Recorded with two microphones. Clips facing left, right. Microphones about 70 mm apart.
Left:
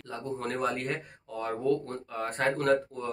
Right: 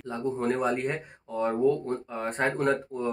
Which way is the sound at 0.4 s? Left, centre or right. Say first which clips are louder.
Right 4 dB; centre.